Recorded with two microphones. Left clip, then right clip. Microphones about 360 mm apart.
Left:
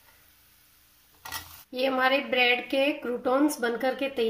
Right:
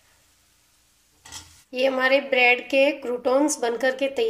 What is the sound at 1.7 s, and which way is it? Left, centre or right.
Speech, centre.